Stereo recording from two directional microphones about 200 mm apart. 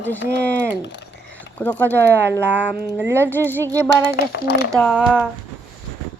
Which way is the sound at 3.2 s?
10° left (ahead or behind).